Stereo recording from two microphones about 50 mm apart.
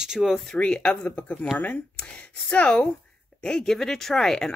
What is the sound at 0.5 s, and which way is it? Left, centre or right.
Speech, left.